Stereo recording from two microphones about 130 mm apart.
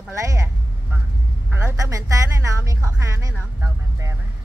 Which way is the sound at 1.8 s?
25° right (ahead or behind).